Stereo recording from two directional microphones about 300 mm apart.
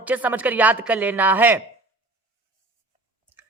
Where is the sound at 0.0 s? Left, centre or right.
Centre.